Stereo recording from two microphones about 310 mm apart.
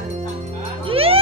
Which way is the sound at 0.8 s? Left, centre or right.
Centre.